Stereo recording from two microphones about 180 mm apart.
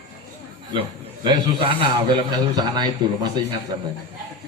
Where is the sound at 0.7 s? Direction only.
25° right (ahead or behind).